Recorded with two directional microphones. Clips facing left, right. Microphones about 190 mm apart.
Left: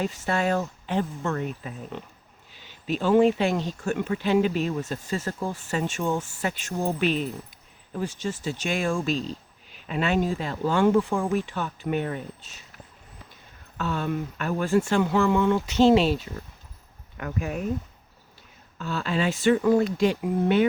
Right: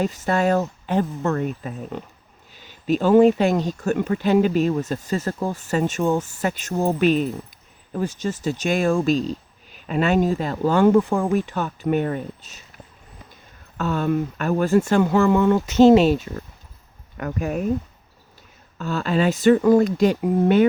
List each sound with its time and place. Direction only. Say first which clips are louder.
0.0 s speech: right 5 dB; 40° right (ahead or behind)
13.7 s speech: right 6 dB; 45° right (ahead or behind)
18.8 s speech: right 5 dB; 45° right (ahead or behind)